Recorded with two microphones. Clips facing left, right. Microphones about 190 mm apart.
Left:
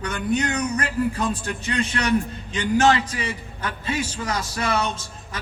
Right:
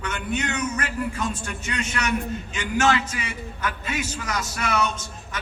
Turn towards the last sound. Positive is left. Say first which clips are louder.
# even
turn(degrees=30)  # may be behind; listen again after turning